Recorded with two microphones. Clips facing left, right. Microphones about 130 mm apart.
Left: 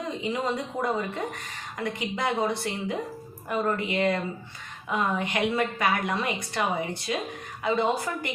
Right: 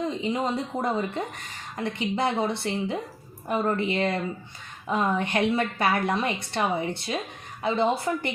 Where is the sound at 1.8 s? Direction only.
30° right (ahead or behind).